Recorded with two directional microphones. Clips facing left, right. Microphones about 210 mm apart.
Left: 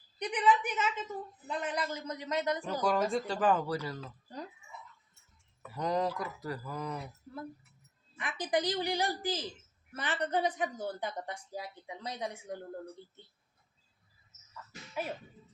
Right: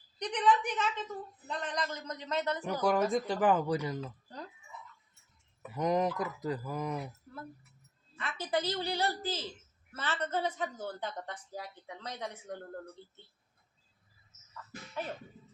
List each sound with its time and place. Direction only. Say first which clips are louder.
0.2 s a woman's voice: even; 5° left (ahead or behind)
2.6 s speech: right 4 dB; 15° right (ahead or behind)
5.6 s speech: right 2 dB; 20° right (ahead or behind)
8.2 s a woman's voice: left 2 dB; 15° left (ahead or behind)